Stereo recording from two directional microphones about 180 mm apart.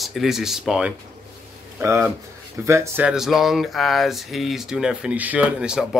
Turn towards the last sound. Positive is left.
turn(degrees=-5)  # may be behind; listen again after turning